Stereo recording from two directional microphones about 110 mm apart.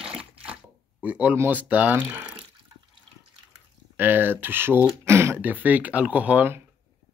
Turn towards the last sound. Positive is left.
turn(degrees=-15)  # may be behind; listen again after turning